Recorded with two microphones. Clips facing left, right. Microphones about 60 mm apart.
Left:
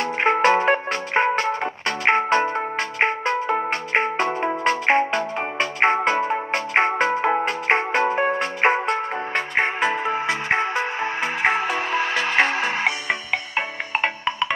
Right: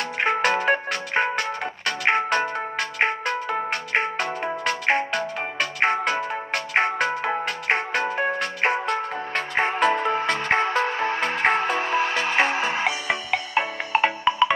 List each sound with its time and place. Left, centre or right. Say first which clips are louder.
0.0 s music: left 4 dB; left
9.3 s music: left 1 dB; centre